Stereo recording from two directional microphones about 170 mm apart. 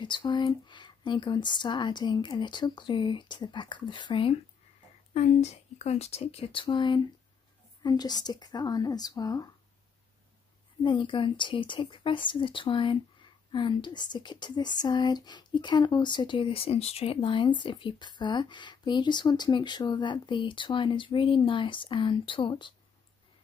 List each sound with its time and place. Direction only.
0.0 s speech: 25° left (ahead or behind)
5.1 s speech: 40° left (ahead or behind); by 9.5 s 20° left (ahead or behind)
10.8 s speech: 30° left (ahead or behind)